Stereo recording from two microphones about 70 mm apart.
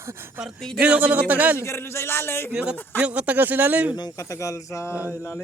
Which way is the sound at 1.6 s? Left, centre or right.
Left.